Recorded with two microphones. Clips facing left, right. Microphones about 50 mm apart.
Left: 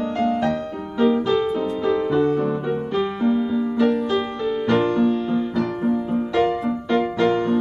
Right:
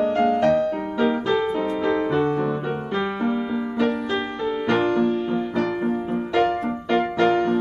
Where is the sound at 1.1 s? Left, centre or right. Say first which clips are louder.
Left 2 dB; right.